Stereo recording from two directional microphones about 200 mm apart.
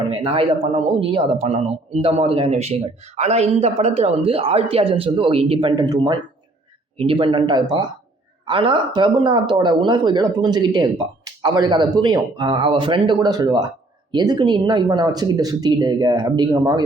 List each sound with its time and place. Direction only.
0.1 s speech: 25° right (ahead or behind)